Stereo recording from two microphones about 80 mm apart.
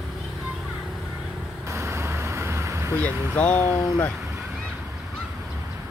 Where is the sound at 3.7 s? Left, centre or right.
Centre.